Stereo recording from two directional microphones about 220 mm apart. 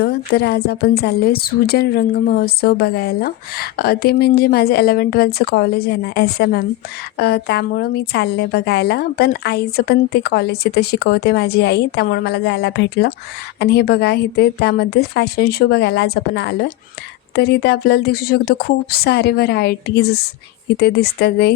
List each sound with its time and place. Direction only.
0.0 s a woman's voice: 45° left (ahead or behind)